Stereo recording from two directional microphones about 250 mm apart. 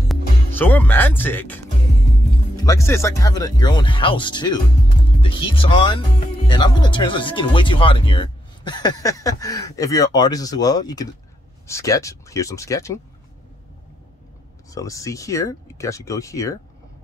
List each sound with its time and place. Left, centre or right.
0.1 s speech: centre
14.7 s speech: centre